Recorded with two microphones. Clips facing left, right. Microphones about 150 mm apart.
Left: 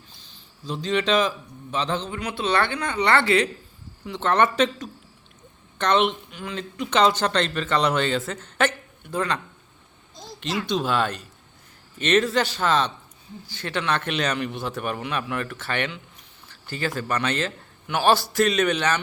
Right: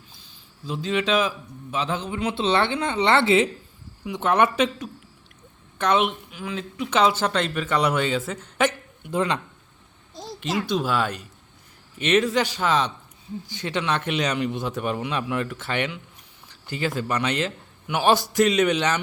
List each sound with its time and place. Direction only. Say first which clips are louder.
0.2 s a sound: right 2 dB; 5° right (ahead or behind)
1.7 s speech: left 1 dB; 5° right (ahead or behind)
2.1 s speech: right 3 dB; 25° right (ahead or behind)
4.0 s speech: even; 10° right (ahead or behind)
10.7 s speech: left 2 dB; 5° right (ahead or behind)